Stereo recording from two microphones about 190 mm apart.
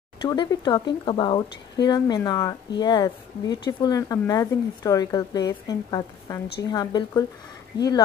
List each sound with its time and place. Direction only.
0.2 s speech: 20° left (ahead or behind)